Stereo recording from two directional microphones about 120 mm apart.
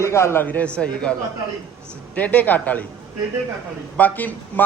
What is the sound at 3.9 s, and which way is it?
Speech, 15° left (ahead or behind).